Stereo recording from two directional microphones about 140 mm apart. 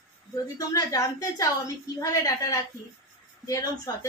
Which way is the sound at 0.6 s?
25° left (ahead or behind).